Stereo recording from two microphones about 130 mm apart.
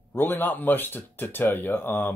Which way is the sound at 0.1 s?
15° left (ahead or behind).